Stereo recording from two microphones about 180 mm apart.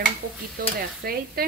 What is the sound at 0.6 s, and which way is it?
Speech, 55° right (ahead or behind).